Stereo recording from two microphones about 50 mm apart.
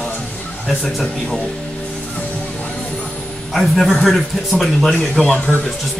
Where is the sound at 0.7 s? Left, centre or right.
Centre.